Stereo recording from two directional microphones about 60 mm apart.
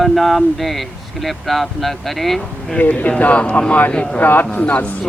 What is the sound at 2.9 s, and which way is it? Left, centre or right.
Speech, left.